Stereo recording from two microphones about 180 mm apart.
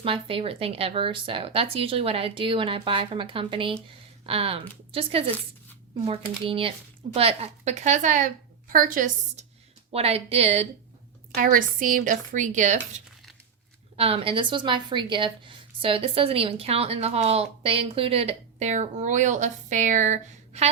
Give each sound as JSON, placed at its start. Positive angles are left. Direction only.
{"t": 0.0, "sound": "a woman's voice", "side_deg": -30}
{"t": 11.3, "sound": "speech", "side_deg": -50}
{"t": 13.9, "sound": "a woman's voice", "side_deg": -30}